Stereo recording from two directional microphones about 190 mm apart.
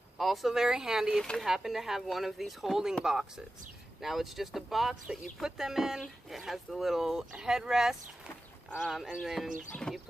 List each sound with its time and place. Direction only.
0.2 s speech: centre (ahead or behind)